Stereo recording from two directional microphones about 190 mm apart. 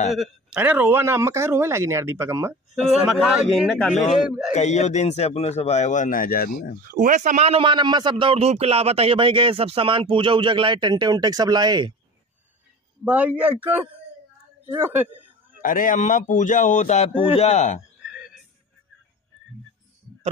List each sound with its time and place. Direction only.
0.1 s a man's voice: 5° right (ahead or behind)
2.7 s speech: centre (ahead or behind)
3.9 s speech: 40° left (ahead or behind)
6.9 s a man's voice: 45° right (ahead or behind); by 11.9 s 20° right (ahead or behind)
13.0 s a man's voice: 10° right (ahead or behind)
14.7 s a sound: 10° right (ahead or behind)
15.6 s speech: 45° left (ahead or behind)